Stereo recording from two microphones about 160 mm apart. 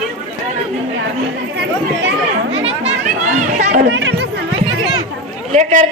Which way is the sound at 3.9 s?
90° right.